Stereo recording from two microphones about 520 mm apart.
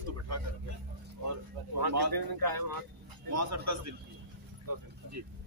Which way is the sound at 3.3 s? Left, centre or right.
Right.